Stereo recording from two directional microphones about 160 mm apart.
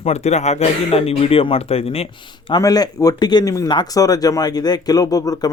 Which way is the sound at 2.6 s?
20° left (ahead or behind).